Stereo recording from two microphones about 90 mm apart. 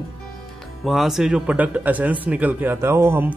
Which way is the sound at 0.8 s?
Centre (ahead or behind).